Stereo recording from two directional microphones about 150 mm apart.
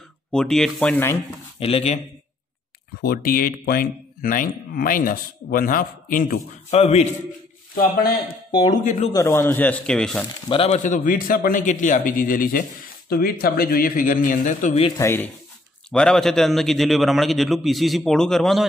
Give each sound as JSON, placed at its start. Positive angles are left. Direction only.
{"t": 0.3, "sound": "a man's voice", "side_deg": 5}
{"t": 1.6, "sound": "speech", "side_deg": 45}
{"t": 3.0, "sound": "speech", "side_deg": 85}
{"t": 6.7, "sound": "speech", "side_deg": 45}
{"t": 7.7, "sound": "a man's voice", "side_deg": 85}
{"t": 8.6, "sound": "speech", "side_deg": 50}
{"t": 9.1, "sound": "speech", "side_deg": 20}
{"t": 10.5, "sound": "speech", "side_deg": 40}
{"t": 10.8, "sound": "a man's voice", "side_deg": 65}
{"t": 13.1, "sound": "speech", "side_deg": 90}
{"t": 15.0, "sound": "speech", "side_deg": 15}
{"t": 15.9, "sound": "a man's voice", "side_deg": 5}